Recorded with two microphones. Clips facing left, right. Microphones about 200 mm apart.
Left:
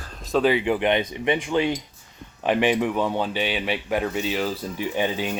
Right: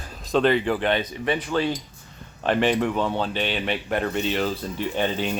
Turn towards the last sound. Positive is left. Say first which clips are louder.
# even
turn(degrees=10)  # may be behind; listen again after turning